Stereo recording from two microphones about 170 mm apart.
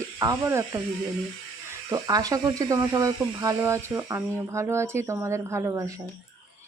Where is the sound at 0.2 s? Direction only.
15° right (ahead or behind).